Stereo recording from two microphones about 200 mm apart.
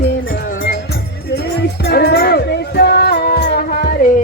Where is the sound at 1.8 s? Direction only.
55° left (ahead or behind).